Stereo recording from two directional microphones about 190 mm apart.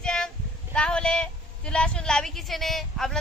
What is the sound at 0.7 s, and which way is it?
A woman's voice, 5° left (ahead or behind).